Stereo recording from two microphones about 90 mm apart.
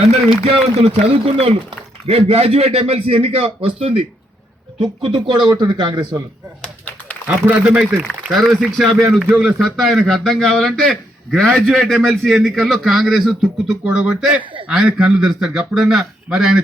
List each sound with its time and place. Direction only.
0.8 s a man's voice: 85° right
5.0 s a man's voice: 80° right; by 6.2 s 50° right (ahead or behind)
7.3 s a man's voice: 15° right (ahead or behind)